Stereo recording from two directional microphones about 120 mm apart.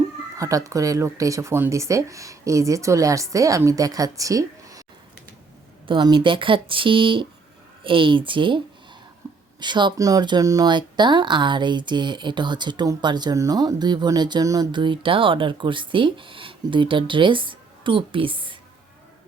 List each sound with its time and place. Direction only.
0.3 s speech: 25° right (ahead or behind)
5.9 s speech: 40° right (ahead or behind)
9.2 s a sound: 25° right (ahead or behind)
9.6 s speech: 40° right (ahead or behind)